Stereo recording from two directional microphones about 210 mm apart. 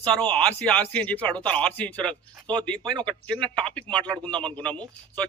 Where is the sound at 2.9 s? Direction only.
20° right (ahead or behind).